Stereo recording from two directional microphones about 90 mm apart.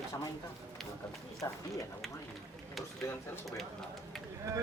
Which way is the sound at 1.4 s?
35° left (ahead or behind).